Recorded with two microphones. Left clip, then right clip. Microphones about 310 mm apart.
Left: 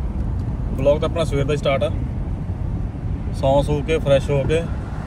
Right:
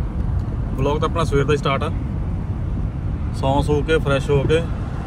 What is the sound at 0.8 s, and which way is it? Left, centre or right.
Speech, centre.